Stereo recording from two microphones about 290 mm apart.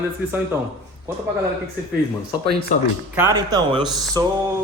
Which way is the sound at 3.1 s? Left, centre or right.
Centre.